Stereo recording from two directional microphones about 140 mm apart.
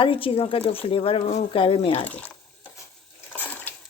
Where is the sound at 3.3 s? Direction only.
15° left (ahead or behind).